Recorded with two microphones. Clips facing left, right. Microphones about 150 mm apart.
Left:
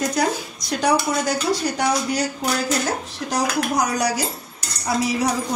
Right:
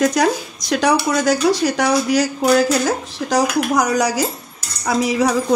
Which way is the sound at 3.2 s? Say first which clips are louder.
Right 5 dB; 90° right.